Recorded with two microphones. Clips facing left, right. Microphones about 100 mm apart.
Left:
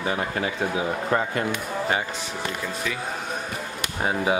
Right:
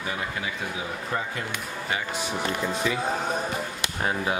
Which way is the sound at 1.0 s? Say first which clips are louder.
Left 5 dB; 55° left (ahead or behind).